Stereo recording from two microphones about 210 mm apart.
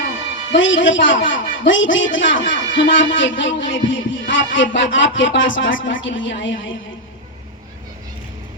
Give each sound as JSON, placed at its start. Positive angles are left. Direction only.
{"t": 0.5, "sound": "speech", "side_deg": 65}